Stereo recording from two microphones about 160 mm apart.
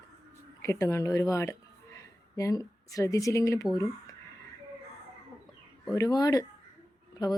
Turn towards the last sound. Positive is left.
turn(degrees=25)  # may be behind; listen again after turning